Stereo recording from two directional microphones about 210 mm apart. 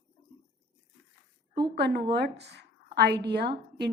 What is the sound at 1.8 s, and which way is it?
A woman's voice, 50° right (ahead or behind).